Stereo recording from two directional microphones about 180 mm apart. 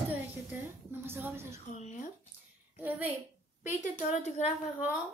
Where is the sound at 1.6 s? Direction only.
45° left (ahead or behind).